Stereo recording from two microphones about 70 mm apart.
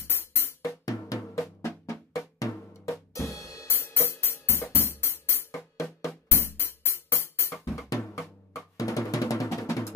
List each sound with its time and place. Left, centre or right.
0.0 s music: left
0.8 s drum: left
1.6 s drum: left
3.6 s music: left
7.6 s drum: left